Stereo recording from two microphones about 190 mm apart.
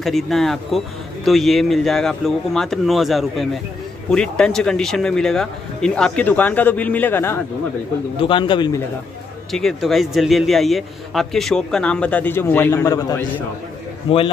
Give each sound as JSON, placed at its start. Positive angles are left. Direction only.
{"t": 0.0, "sound": "a man's voice", "side_deg": 0}
{"t": 8.2, "sound": "a man's voice", "side_deg": 25}
{"t": 9.5, "sound": "a man's voice", "side_deg": 0}
{"t": 14.1, "sound": "a man's voice", "side_deg": 30}